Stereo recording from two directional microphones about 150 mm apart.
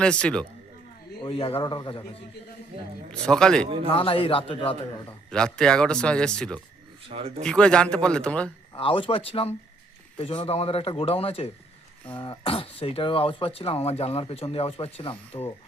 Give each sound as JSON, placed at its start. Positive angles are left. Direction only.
{"t": 0.0, "sound": "a man's voice", "side_deg": 5}
{"t": 1.2, "sound": "speech", "side_deg": 40}
{"t": 3.1, "sound": "speech", "side_deg": 5}
{"t": 3.9, "sound": "speech", "side_deg": 35}
{"t": 5.3, "sound": "speech", "side_deg": 5}
{"t": 7.1, "sound": "speech", "side_deg": -40}
{"t": 7.4, "sound": "a man's voice", "side_deg": 5}
{"t": 8.7, "sound": "speech", "side_deg": 35}